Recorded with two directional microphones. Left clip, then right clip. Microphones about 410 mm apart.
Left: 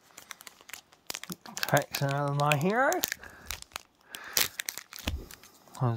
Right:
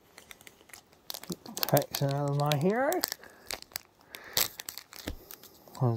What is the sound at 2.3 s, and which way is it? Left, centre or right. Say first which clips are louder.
Speech: left 2 dB; centre.